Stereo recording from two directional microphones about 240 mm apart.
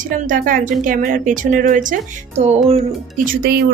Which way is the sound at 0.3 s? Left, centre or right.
Right.